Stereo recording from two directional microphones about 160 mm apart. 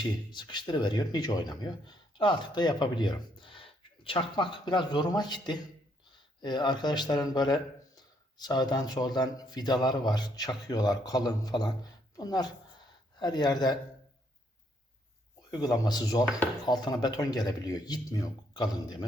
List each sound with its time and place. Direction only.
0.0 s speech: 30° left (ahead or behind)
15.4 s speech: 25° left (ahead or behind)